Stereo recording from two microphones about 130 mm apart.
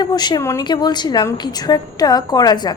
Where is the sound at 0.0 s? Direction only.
35° left (ahead or behind).